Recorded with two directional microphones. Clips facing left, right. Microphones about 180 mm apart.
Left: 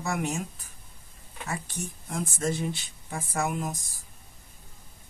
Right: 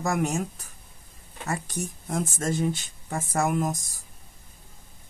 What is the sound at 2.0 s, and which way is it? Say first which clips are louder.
Speech: right 1 dB; 45° right (ahead or behind).